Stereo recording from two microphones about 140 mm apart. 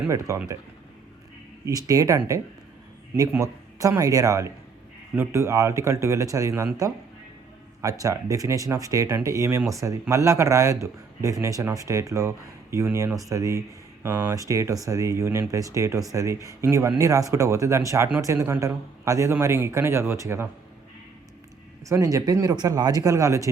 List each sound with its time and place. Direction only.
0.1 s speech: 20° right (ahead or behind)
1.6 s speech: 25° right (ahead or behind)
7.8 s speech: 25° right (ahead or behind)
21.8 s speech: 20° right (ahead or behind)